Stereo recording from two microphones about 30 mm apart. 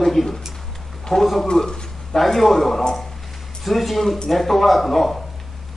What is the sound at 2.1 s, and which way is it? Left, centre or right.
A man's voice, centre.